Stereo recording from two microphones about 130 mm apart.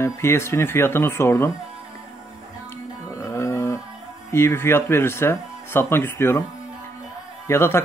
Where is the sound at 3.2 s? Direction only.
25° left (ahead or behind).